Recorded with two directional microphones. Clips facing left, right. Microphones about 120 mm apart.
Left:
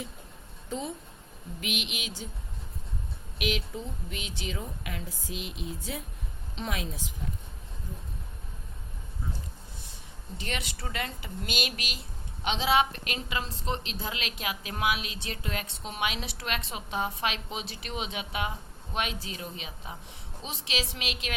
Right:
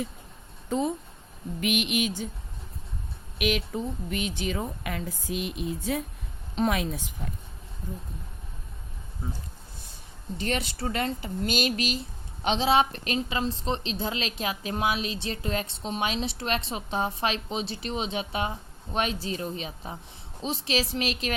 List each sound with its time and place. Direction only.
1.6 s a sound: 50° right (ahead or behind)
3.3 s a woman's voice: 55° right (ahead or behind)
10.3 s a woman's voice: 40° right (ahead or behind)